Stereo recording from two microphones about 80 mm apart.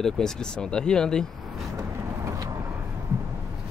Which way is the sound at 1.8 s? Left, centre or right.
Right.